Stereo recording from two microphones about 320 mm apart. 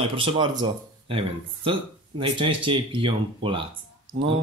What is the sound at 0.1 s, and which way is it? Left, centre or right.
A man's voice, centre.